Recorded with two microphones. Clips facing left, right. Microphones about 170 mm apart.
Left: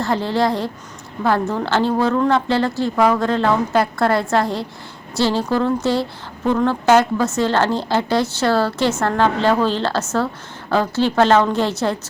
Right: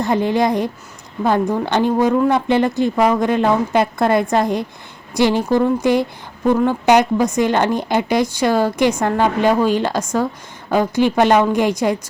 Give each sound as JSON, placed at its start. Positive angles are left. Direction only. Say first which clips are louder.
{"t": 0.0, "sound": "a woman's voice", "louder": "right 2 dB", "side_deg": -15}